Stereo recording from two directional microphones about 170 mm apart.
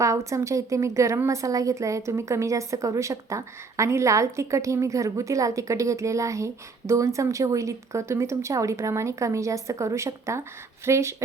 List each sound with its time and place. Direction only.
0.0 s a woman's voice: 20° right (ahead or behind)